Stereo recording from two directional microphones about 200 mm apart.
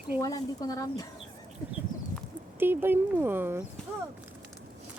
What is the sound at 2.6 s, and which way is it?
Speech, 10° right (ahead or behind).